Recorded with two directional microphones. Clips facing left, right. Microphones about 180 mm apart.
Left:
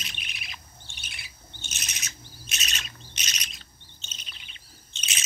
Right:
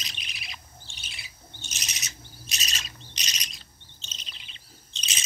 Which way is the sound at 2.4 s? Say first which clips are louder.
Left 1 dB; 35° right (ahead or behind).